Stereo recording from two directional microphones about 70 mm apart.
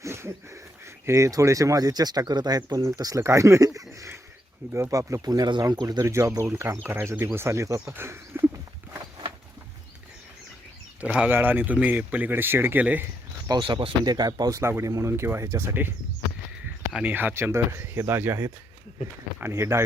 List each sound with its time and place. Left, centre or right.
0.0 s speech: right
5.3 s speech: right
6.0 s speech: right
7.9 s speech: right
11.0 s speech: centre
11.3 s speech: right
13.5 s speech: right
14.6 s speech: right
17.0 s speech: right